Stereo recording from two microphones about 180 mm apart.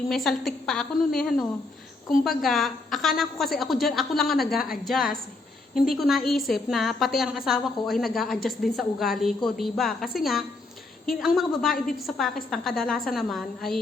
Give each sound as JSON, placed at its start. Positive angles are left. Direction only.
{"t": 0.1, "sound": "a woman's voice", "side_deg": 0}
{"t": 4.5, "sound": "a woman's voice", "side_deg": 55}
{"t": 4.9, "sound": "a woman's voice", "side_deg": 0}